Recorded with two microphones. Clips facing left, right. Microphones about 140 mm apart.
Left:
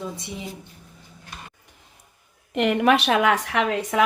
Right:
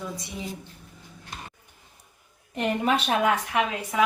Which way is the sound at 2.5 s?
85° left.